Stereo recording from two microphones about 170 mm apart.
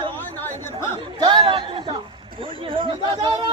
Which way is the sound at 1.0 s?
30° right (ahead or behind).